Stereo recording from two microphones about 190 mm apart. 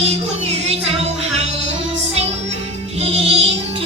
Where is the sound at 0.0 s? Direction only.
35° right (ahead or behind).